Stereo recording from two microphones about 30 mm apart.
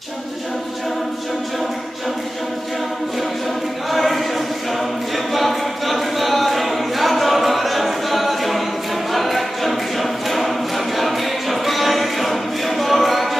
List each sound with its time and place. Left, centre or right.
3.9 s a sound: centre
4.7 s choir: centre
11.0 s music: centre